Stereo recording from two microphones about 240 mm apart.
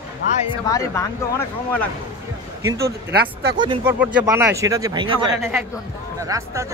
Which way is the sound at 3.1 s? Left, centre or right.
Right.